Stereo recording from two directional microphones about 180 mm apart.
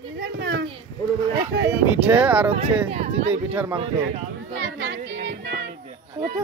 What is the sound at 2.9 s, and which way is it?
Speech, 35° right (ahead or behind).